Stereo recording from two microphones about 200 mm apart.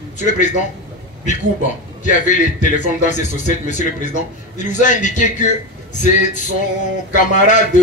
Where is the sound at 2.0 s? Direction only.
40° left (ahead or behind).